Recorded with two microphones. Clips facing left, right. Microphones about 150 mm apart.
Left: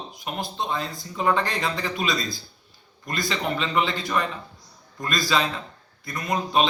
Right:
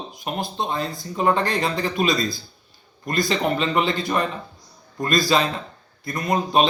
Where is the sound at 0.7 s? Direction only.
45° right (ahead or behind).